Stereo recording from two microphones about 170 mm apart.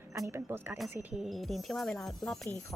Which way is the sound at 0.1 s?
15° right (ahead or behind).